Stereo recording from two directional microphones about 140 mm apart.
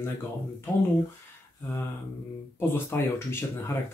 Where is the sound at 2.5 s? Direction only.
15° left (ahead or behind).